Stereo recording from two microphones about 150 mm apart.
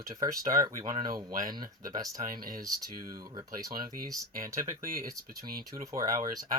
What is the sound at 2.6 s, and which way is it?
Speech, 25° right (ahead or behind).